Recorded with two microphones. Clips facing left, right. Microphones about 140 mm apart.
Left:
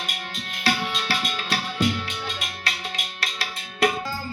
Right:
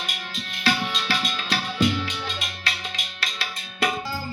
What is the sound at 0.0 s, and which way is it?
Tabla, 50° left (ahead or behind).